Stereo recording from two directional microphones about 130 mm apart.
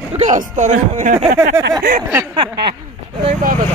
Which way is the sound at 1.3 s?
20° right (ahead or behind).